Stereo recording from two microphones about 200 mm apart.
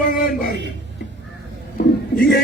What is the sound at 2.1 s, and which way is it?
Speech, 50° left (ahead or behind).